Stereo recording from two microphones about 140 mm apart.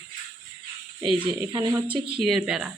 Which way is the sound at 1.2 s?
35° right (ahead or behind).